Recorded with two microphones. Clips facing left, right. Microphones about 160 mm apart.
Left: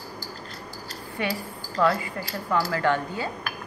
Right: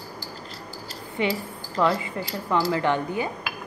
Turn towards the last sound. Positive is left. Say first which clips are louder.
# right 1 dB
turn(degrees=-20)  # may be behind; listen again after turning